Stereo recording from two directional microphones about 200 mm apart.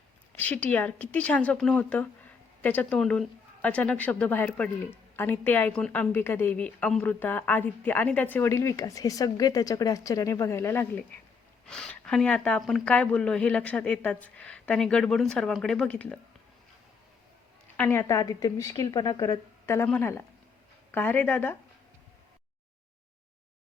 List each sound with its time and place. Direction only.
0.3 s a woman's voice: 10° left (ahead or behind)
17.7 s a woman's voice: 10° left (ahead or behind)